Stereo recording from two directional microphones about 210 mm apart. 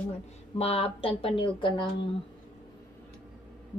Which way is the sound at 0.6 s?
25° left (ahead or behind).